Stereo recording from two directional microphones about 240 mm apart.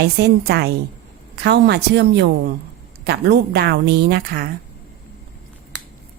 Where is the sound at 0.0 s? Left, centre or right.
Right.